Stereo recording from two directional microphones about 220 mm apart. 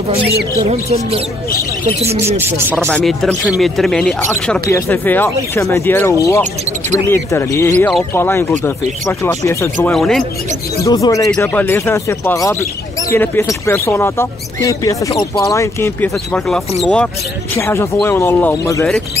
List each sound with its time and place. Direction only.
0.7 s speech: 25° right (ahead or behind)
2.0 s speech: 10° right (ahead or behind)
2.9 s speech: 5° left (ahead or behind)
10.8 s speech: 15° left (ahead or behind)